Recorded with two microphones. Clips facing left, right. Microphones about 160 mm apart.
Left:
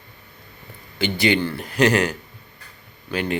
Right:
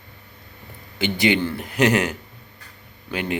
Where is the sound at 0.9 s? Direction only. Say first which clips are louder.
Even; 20° right (ahead or behind).